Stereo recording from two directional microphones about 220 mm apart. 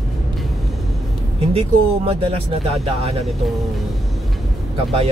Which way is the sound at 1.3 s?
25° right (ahead or behind).